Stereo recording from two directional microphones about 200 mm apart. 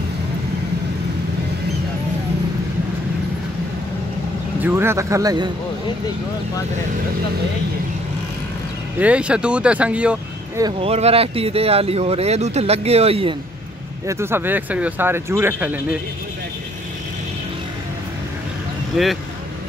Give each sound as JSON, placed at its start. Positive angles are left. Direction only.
{"t": 4.6, "sound": "a man's voice", "side_deg": -10}
{"t": 9.0, "sound": "speech", "side_deg": -5}
{"t": 10.6, "sound": "speech", "side_deg": -30}
{"t": 14.0, "sound": "speech", "side_deg": -10}
{"t": 18.9, "sound": "speech", "side_deg": 0}